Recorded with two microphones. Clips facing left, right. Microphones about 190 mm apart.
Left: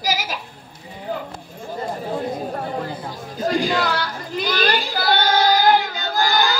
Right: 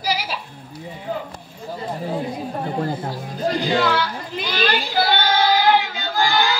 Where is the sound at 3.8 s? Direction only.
40° left (ahead or behind).